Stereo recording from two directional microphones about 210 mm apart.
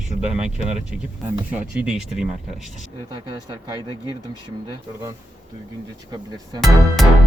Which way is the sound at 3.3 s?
20° right (ahead or behind).